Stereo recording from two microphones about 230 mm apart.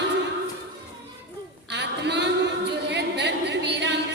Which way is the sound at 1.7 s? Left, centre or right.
Right.